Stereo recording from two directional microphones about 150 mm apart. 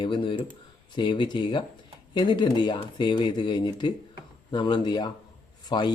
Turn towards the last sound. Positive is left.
turn(degrees=30)  # may be behind; listen again after turning